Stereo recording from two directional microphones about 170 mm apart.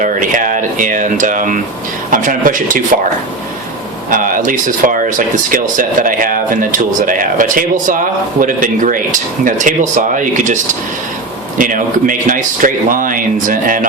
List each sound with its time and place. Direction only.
0.0 s speech: 50° right (ahead or behind)
4.1 s speech: 50° right (ahead or behind)